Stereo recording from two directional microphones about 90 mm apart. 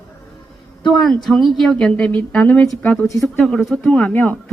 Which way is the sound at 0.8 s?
5° left (ahead or behind).